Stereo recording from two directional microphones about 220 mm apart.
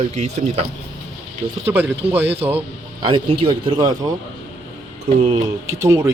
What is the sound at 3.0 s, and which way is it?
Speech, 20° right (ahead or behind).